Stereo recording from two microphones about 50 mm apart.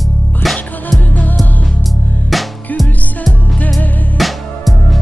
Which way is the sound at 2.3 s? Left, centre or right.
Centre.